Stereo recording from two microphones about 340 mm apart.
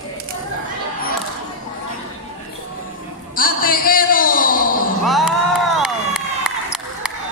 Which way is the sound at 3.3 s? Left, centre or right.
Left.